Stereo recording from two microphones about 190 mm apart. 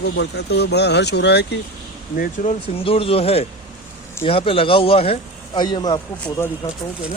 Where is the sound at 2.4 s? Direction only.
50° left (ahead or behind).